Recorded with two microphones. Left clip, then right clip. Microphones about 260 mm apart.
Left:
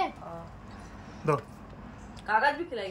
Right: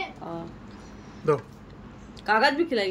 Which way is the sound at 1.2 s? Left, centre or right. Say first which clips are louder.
Right 4 dB; centre.